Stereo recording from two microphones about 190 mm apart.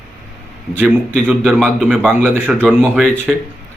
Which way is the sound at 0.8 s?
5° right (ahead or behind).